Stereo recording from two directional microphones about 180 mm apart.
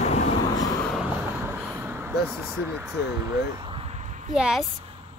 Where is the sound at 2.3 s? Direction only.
15° right (ahead or behind); by 4.3 s 40° right (ahead or behind).